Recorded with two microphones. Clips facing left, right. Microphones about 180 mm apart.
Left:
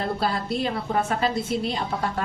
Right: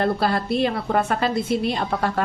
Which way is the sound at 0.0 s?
70° right (ahead or behind).